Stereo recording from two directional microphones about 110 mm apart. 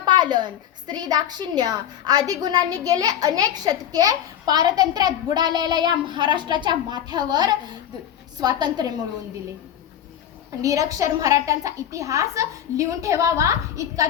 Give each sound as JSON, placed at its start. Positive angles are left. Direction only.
{"t": 0.0, "sound": "a sound", "side_deg": -40}
{"t": 0.9, "sound": "a child's voice", "side_deg": -40}
{"t": 10.6, "sound": "a woman's voice", "side_deg": -30}